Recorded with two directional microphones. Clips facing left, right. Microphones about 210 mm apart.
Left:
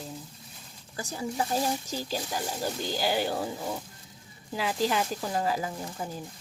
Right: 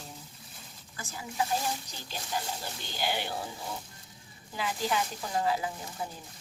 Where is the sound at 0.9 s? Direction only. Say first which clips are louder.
Left 4 dB; 40° left (ahead or behind).